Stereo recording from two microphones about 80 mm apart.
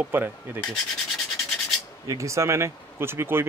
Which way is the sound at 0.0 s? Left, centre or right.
Right.